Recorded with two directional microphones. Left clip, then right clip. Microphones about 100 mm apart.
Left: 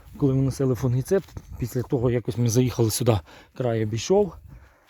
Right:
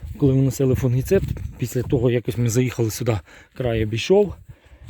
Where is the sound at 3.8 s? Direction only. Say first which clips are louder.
Right 5 dB; 75° right (ahead or behind).